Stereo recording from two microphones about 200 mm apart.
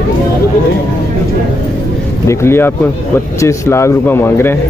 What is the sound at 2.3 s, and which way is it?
Speech, 10° left (ahead or behind).